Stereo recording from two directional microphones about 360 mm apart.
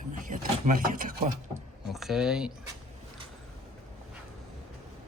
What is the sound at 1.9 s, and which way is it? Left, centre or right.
Speech, centre.